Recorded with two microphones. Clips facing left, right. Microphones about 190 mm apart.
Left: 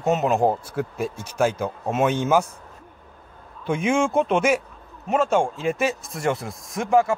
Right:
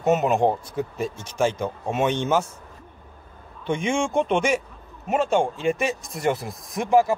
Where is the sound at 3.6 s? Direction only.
5° left (ahead or behind).